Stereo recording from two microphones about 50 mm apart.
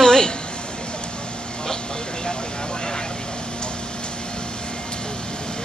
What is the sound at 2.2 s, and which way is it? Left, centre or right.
Vehicle, centre.